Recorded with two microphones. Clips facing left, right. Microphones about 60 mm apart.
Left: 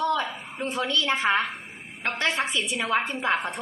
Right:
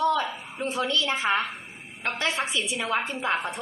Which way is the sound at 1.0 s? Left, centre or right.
Left.